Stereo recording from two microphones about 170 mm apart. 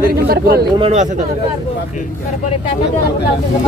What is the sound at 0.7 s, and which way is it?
Speech, 35° right (ahead or behind).